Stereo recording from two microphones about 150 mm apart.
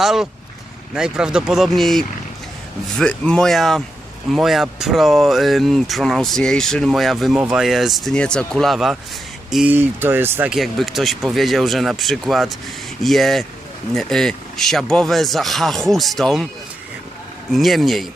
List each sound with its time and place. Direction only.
0.0 s speech: centre (ahead or behind)
9.7 s speech: 15° right (ahead or behind)
10.5 s speech: centre (ahead or behind)
17.5 s speech: centre (ahead or behind)